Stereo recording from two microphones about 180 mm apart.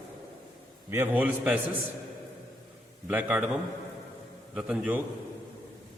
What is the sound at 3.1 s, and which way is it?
A man's voice, 10° right (ahead or behind).